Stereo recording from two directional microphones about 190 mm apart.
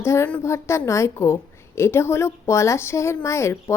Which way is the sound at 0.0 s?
15° left (ahead or behind).